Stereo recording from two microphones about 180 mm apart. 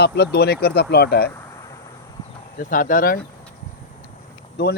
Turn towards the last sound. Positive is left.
turn(degrees=60)  # may be behind; listen again after turning